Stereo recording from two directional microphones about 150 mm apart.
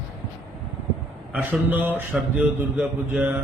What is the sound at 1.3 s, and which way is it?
A man's voice, 10° right (ahead or behind).